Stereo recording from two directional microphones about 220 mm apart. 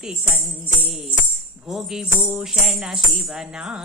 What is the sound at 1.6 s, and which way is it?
Music, centre (ahead or behind).